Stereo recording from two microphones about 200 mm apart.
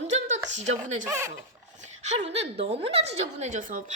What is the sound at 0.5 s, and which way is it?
Speech, 35° right (ahead or behind).